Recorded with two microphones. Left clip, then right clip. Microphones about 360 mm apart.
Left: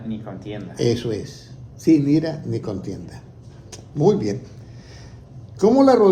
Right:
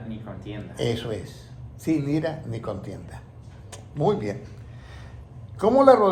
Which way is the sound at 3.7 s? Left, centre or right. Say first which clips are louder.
Left 6 dB; centre.